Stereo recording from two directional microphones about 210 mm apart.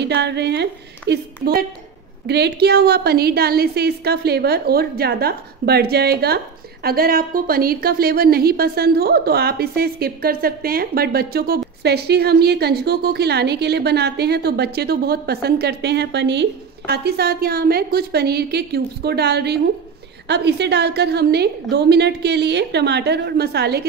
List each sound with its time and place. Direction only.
0.0 s a woman's voice: 55° right (ahead or behind)